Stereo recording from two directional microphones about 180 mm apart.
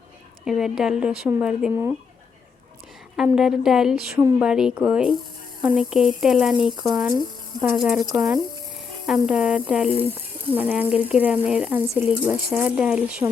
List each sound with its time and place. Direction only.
0.4 s speech: 5° right (ahead or behind)
3.3 s speech: 5° right (ahead or behind)
4.2 s speech: 15° right (ahead or behind)
4.4 s speech: 5° right (ahead or behind)